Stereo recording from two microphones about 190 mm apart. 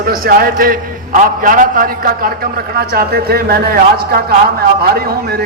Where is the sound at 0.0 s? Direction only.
50° right (ahead or behind).